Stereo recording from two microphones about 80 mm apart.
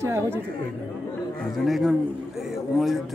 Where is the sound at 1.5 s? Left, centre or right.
Centre.